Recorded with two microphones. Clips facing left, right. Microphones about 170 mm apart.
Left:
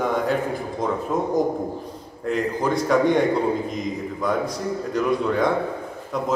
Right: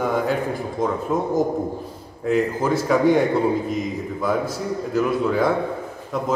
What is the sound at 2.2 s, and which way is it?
A man's voice, 5° right (ahead or behind).